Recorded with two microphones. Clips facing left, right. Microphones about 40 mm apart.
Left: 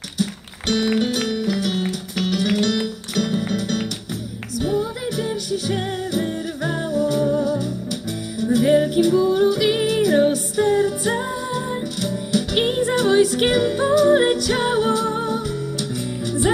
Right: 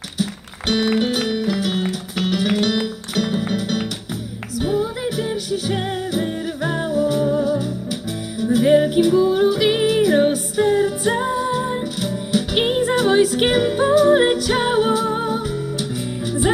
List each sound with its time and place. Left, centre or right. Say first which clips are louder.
0.7 s music: right 1 dB; centre